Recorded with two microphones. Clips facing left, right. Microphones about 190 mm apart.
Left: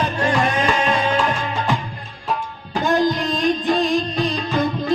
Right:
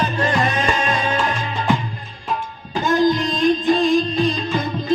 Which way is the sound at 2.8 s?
60° left (ahead or behind).